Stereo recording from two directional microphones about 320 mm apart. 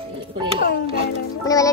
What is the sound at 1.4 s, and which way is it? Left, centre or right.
Music, centre.